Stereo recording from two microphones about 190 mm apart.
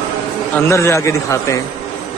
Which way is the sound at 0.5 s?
15° left (ahead or behind).